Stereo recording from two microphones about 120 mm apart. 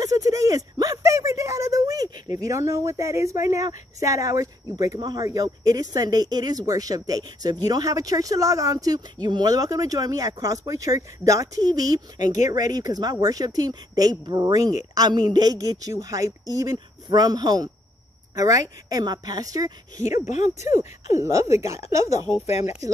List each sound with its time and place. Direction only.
0.0 s a sound: 30° right (ahead or behind)
2.3 s a woman's voice: 25° right (ahead or behind)
20.2 s speech: 75° left (ahead or behind)
21.2 s speech: 25° right (ahead or behind)
22.3 s speech: 60° left (ahead or behind)